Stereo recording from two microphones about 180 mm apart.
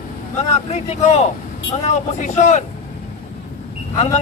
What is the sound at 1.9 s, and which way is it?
Speech, 40° left (ahead or behind).